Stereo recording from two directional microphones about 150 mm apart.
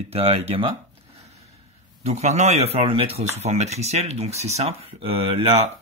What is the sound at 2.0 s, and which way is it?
Speech, 50° right (ahead or behind).